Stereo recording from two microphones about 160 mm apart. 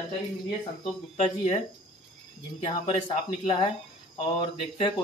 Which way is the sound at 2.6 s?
35° left (ahead or behind).